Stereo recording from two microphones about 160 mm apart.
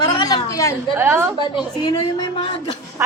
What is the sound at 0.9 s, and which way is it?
Speech, 15° right (ahead or behind).